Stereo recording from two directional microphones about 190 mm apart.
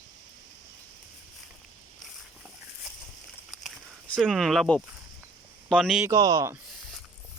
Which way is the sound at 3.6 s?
5° left (ahead or behind).